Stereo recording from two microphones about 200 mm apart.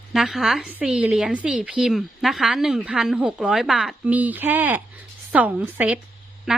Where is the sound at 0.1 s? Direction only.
Centre (ahead or behind).